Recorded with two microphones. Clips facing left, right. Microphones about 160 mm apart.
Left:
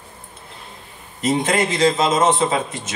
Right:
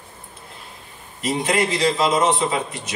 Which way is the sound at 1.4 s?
45° left (ahead or behind).